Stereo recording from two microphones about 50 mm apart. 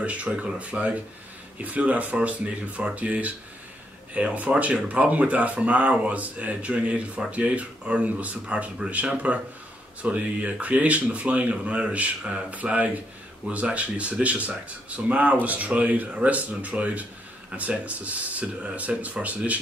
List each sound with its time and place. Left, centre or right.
0.0 s speech: right